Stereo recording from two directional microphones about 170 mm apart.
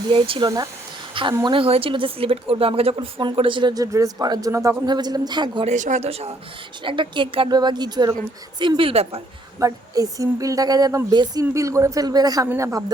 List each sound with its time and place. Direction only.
0.1 s speech: 30° right (ahead or behind)
1.5 s speech: 35° right (ahead or behind)
5.6 s speech: 45° right (ahead or behind)
9.6 s speech: 20° right (ahead or behind)